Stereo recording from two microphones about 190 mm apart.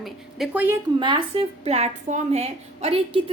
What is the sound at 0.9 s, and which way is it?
A woman's voice, 25° right (ahead or behind).